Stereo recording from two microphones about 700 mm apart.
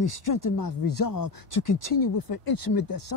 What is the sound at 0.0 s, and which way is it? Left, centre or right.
Speech, left.